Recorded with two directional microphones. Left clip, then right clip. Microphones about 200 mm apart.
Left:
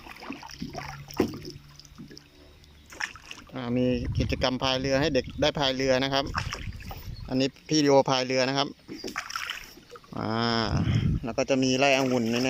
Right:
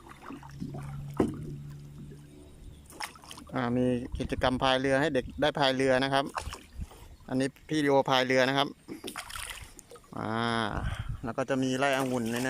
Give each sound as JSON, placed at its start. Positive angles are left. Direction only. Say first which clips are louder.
{"t": 0.1, "sound": "a sound", "louder": "left 6 dB", "side_deg": 15}
{"t": 3.5, "sound": "speech", "louder": "left 1 dB", "side_deg": 0}
{"t": 9.2, "sound": "rowboat", "louder": "left 7 dB", "side_deg": -35}
{"t": 10.1, "sound": "speech", "louder": "left 3 dB", "side_deg": 5}